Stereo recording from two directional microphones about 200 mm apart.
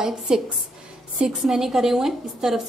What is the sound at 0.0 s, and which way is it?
A woman's voice, 5° right (ahead or behind).